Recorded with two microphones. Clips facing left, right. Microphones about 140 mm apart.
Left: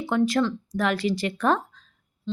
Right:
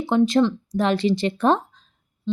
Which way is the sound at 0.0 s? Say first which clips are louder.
Right 4 dB; 20° right (ahead or behind).